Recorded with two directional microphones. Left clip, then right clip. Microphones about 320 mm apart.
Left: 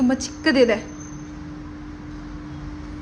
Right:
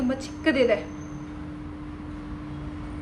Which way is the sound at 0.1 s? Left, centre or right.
Left.